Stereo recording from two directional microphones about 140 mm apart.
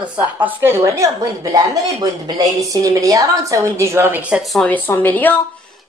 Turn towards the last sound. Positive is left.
turn(degrees=15)  # may be behind; listen again after turning